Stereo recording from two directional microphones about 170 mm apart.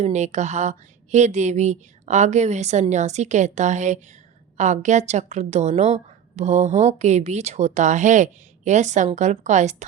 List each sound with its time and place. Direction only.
0.0 s a woman's voice: 40° right (ahead or behind)